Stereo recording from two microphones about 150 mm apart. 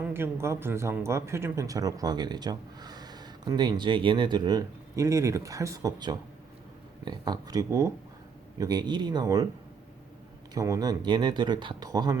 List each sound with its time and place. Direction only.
0.0 s speech: 15° right (ahead or behind)
10.5 s speech: 25° right (ahead or behind)